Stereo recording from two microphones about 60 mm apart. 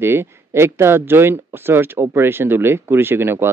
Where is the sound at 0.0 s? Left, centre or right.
Right.